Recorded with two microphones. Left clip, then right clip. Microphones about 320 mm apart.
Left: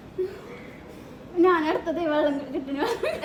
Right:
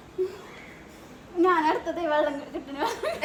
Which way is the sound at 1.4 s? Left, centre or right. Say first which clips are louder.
Left 1 dB; centre.